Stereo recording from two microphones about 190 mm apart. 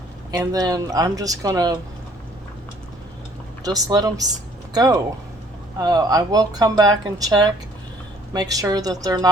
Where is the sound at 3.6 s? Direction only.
20° right (ahead or behind).